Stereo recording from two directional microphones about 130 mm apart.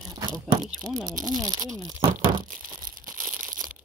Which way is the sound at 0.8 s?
30° right (ahead or behind).